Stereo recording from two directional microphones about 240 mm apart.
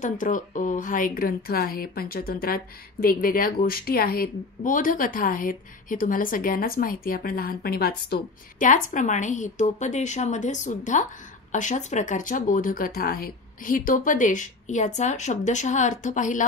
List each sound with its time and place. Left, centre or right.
0.0 s a woman's voice: left